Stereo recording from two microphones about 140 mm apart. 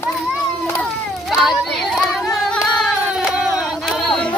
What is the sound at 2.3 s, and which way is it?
Singing, 5° left (ahead or behind).